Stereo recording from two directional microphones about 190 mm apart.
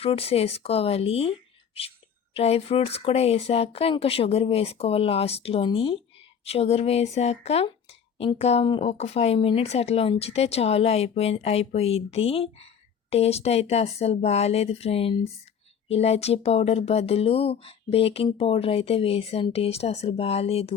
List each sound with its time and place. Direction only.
0.0 s speech: 30° left (ahead or behind)